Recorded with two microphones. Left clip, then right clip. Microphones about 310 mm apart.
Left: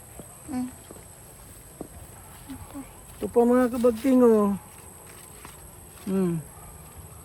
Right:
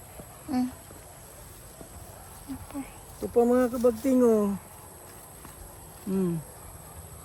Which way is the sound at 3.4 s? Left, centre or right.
Left.